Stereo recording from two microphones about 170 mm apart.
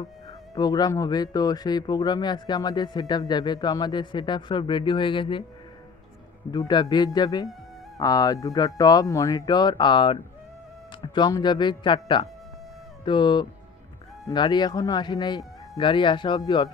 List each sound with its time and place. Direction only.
0.6 s speech: 25° left (ahead or behind)
6.5 s speech: 25° left (ahead or behind)